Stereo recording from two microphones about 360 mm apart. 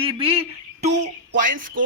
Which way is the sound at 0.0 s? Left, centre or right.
Centre.